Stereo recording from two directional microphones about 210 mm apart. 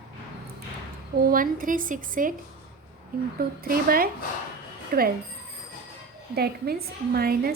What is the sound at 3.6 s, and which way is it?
A woman's voice, 45° right (ahead or behind).